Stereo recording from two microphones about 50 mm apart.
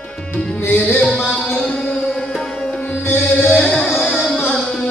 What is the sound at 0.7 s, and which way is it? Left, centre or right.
Music, left.